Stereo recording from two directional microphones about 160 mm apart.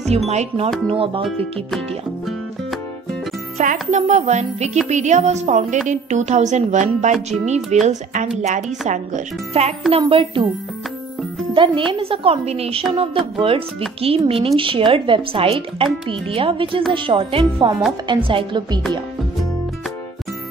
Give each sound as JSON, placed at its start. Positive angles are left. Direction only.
{"t": 0.3, "sound": "speech", "side_deg": -45}
{"t": 0.8, "sound": "speech", "side_deg": -35}
{"t": 3.6, "sound": "speech", "side_deg": -50}
{"t": 11.5, "sound": "speech", "side_deg": -30}